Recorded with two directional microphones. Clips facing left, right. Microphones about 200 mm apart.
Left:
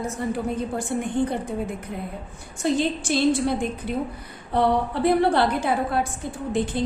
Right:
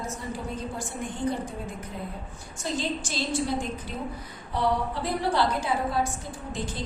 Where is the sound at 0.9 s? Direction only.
60° left (ahead or behind).